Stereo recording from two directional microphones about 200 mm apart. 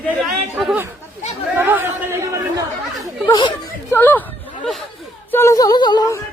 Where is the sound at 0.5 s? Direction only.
5° right (ahead or behind).